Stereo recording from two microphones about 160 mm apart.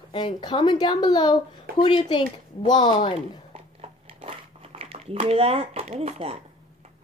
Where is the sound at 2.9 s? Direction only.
35° left (ahead or behind).